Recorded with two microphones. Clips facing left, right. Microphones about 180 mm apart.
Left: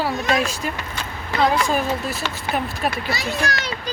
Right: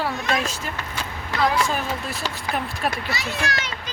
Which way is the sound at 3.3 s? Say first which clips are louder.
Left 3 dB; 40° left (ahead or behind).